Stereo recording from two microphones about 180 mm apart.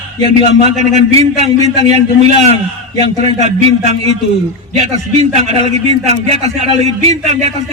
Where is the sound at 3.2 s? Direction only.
40° right (ahead or behind).